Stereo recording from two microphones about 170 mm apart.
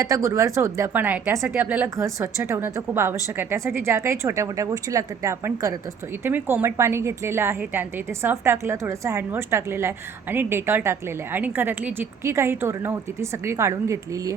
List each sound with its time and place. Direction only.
0.0 s a woman's voice: 20° right (ahead or behind)